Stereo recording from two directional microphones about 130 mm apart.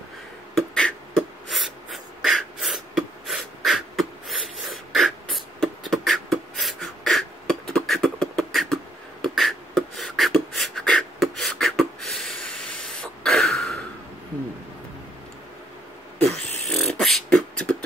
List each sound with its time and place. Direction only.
0.6 s beatboxing: 5° left (ahead or behind)
16.3 s beatboxing: 50° right (ahead or behind)
16.7 s beatboxing: centre (ahead or behind)